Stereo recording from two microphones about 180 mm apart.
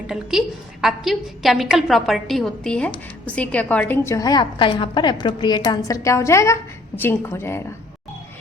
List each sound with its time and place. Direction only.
0.1 s a woman's voice: 5° right (ahead or behind); by 7.6 s 15° left (ahead or behind)